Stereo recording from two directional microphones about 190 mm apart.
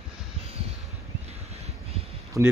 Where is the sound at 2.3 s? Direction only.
15° right (ahead or behind).